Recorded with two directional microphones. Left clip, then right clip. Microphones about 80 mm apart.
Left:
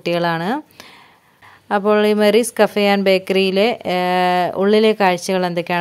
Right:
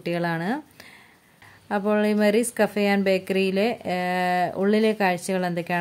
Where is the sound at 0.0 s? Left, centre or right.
Left.